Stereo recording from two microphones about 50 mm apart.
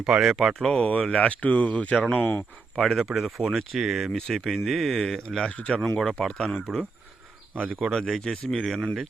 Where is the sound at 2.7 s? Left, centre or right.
Centre.